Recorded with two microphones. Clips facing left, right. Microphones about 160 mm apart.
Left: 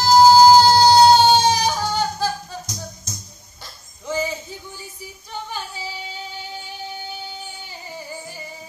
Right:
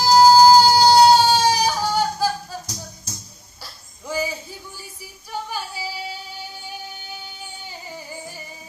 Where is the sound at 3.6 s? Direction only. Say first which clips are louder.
Left 3 dB; 10° right (ahead or behind).